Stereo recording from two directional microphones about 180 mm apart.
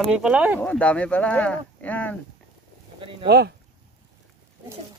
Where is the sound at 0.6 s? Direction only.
5° left (ahead or behind).